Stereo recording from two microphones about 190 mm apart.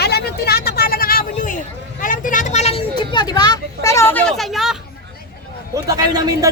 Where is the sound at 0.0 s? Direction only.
55° left (ahead or behind); by 2.8 s 35° left (ahead or behind).